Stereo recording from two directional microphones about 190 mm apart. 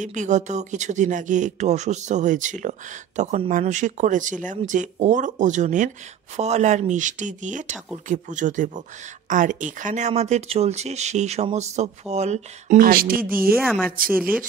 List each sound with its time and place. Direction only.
0.0 s speech: 40° right (ahead or behind)
12.7 s speech: 50° right (ahead or behind)
13.6 s a woman's voice: 5° left (ahead or behind)
14.1 s speech: 10° right (ahead or behind)